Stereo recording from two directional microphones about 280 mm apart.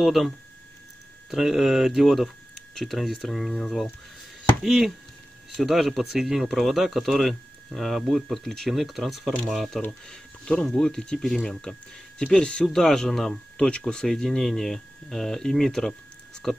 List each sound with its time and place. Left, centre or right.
0.0 s speech: centre
1.3 s speech: centre